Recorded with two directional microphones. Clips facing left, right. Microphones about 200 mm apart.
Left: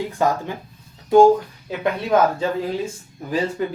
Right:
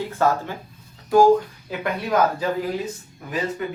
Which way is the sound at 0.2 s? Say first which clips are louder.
Even; 15° left (ahead or behind).